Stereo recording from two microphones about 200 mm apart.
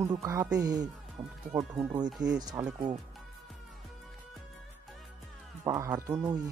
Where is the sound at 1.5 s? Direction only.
5° right (ahead or behind).